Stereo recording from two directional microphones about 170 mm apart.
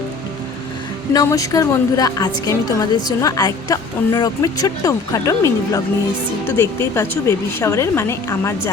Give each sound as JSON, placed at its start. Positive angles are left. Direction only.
{"t": 1.1, "sound": "a woman's voice", "side_deg": 20}